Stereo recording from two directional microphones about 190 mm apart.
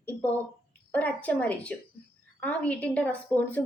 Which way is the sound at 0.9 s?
10° left (ahead or behind).